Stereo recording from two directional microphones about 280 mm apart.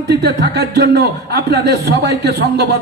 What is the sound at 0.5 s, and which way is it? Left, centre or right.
Speech, right.